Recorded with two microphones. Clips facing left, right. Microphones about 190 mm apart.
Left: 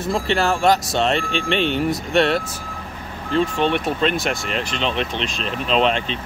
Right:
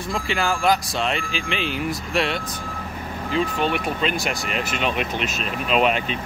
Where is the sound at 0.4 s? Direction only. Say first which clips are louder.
Left 1 dB; 30° left (ahead or behind).